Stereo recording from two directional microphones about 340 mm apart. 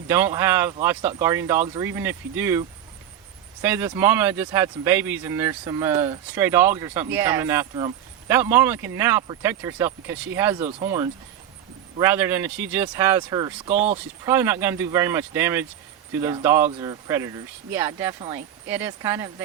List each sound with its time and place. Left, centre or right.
0.1 s speech: centre
10.6 s speech: centre